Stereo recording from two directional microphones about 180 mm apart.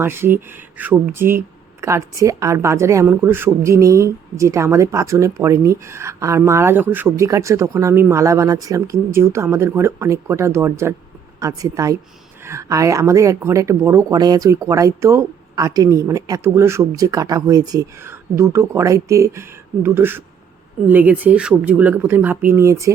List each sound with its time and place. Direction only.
0.0 s a woman's voice: 15° right (ahead or behind)